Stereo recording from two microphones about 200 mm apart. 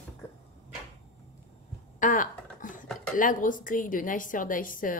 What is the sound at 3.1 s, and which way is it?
A woman's voice, 40° left (ahead or behind).